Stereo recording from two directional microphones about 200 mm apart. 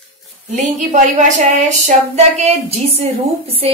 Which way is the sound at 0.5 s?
40° right (ahead or behind).